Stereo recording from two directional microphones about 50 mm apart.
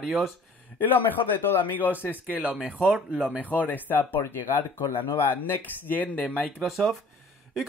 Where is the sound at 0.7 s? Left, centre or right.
Left.